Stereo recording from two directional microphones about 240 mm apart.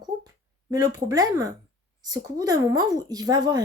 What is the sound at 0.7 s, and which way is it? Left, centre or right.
A woman's voice, centre.